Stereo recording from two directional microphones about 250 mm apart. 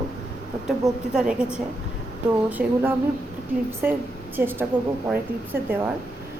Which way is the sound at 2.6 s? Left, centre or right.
Centre.